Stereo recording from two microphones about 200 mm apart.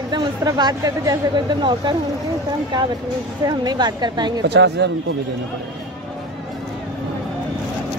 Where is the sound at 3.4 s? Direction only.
20° right (ahead or behind).